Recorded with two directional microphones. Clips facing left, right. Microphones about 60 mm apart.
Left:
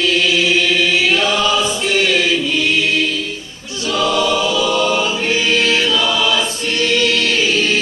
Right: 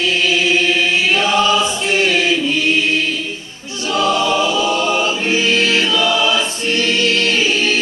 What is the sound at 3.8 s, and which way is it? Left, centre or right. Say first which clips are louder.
Choir: even; right.